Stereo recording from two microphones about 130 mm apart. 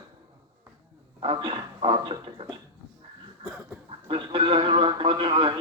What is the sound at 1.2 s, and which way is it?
Speech, 40° right (ahead or behind).